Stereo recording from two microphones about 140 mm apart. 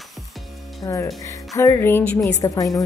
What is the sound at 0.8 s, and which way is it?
Speech, 20° left (ahead or behind).